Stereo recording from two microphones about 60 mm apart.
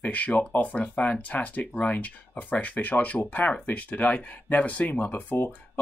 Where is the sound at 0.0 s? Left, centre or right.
Left.